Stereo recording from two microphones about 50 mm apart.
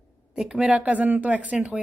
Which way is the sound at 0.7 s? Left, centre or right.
Right.